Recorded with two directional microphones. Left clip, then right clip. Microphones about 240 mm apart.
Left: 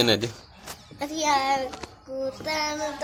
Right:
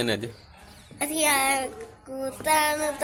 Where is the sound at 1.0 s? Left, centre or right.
Right.